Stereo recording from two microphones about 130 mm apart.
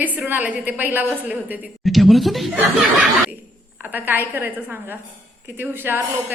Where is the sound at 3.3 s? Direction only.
15° right (ahead or behind).